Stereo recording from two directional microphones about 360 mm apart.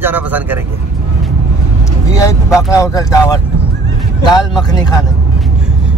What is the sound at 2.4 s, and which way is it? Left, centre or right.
Speech, centre.